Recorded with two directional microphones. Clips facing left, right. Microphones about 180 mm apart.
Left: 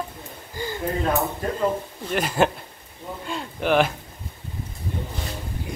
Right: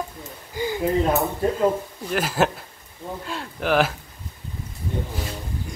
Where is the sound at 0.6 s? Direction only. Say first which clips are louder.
Right 5 dB; 15° right (ahead or behind).